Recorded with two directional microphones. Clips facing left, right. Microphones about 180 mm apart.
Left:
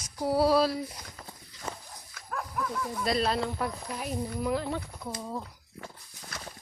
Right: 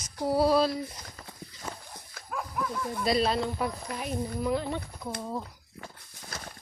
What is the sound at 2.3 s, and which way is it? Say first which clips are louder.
Speech: right 1 dB; 5° right (ahead or behind).